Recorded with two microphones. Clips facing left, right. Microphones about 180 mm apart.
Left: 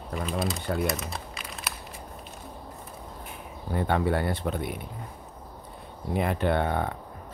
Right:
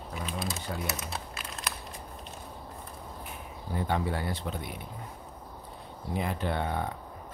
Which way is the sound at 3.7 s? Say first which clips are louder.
Left 5 dB; 60° left (ahead or behind).